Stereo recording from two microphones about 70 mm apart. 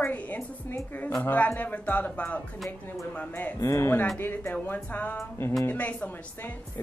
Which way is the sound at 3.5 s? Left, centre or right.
Left.